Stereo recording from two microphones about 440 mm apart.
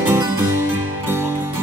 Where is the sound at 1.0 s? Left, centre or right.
Centre.